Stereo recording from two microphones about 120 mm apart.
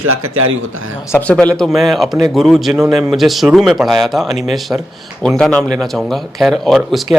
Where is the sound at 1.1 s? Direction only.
10° left (ahead or behind).